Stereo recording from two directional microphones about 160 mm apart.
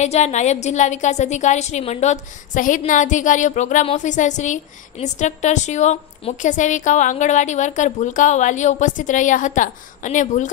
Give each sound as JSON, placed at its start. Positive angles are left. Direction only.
{"t": 0.0, "sound": "a woman's voice", "side_deg": 45}